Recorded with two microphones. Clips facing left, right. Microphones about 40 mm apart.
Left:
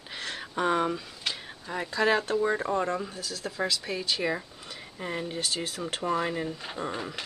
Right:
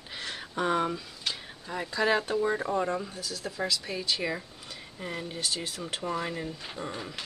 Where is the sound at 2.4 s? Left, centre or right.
Centre.